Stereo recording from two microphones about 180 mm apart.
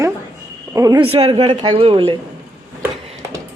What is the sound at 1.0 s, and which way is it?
Speech, 30° right (ahead or behind).